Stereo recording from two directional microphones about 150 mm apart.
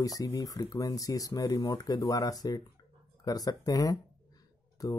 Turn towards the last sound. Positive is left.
turn(degrees=25)  # may be behind; listen again after turning